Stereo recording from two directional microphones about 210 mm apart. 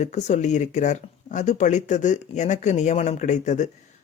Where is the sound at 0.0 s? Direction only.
35° left (ahead or behind).